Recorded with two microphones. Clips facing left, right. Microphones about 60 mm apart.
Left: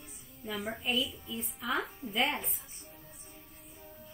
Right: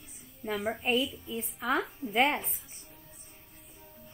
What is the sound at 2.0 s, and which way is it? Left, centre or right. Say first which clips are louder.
Speech: right 5 dB; right.